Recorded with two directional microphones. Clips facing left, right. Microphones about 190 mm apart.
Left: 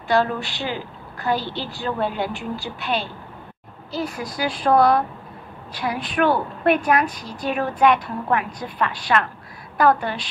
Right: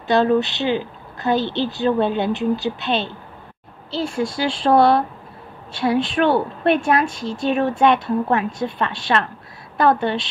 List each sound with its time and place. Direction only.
0.1 s a woman's voice: 20° right (ahead or behind)